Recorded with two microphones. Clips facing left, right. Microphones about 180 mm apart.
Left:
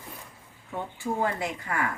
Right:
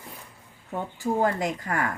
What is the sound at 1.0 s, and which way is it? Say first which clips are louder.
Speech: right 4 dB; 40° right (ahead or behind).